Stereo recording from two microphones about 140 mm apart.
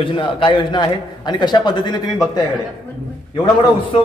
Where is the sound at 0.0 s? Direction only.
35° left (ahead or behind).